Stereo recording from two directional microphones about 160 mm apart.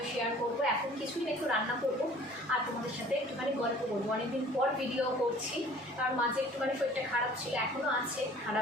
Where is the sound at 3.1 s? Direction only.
5° right (ahead or behind).